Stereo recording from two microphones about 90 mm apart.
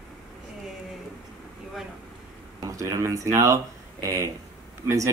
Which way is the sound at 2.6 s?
35° right (ahead or behind).